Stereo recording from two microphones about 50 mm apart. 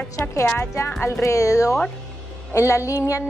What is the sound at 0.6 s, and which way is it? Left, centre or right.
Speech, left.